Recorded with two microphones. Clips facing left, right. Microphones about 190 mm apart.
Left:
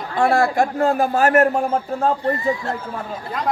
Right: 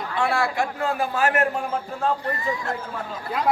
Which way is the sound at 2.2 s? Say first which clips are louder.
Left 6 dB; 30° left (ahead or behind).